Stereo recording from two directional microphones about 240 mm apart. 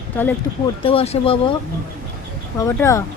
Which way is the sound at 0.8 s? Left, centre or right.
Left.